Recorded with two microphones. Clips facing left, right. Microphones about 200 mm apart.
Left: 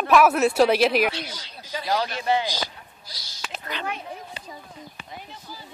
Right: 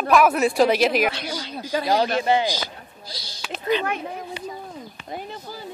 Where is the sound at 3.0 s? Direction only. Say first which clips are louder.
Right 11 dB; 30° right (ahead or behind).